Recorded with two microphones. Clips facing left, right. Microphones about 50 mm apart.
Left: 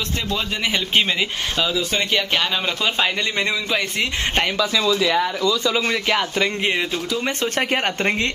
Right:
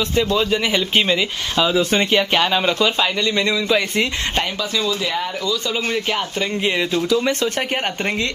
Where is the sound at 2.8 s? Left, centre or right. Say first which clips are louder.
Right 3 dB; centre.